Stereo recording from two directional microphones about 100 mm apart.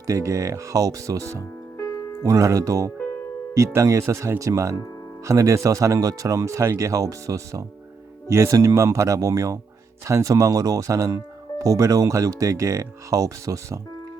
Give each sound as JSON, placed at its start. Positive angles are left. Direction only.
{"t": 0.1, "sound": "speech", "side_deg": -35}
{"t": 1.8, "sound": "music", "side_deg": 35}
{"t": 2.2, "sound": "speech", "side_deg": -35}